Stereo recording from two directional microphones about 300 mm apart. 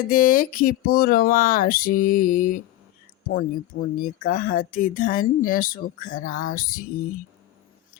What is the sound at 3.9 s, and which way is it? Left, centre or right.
Speech, left.